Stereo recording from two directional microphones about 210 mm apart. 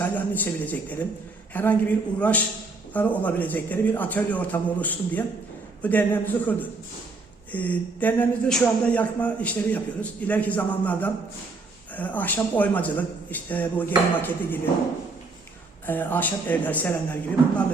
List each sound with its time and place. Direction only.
0.0 s speech: 10° left (ahead or behind)
15.9 s speech: 10° left (ahead or behind)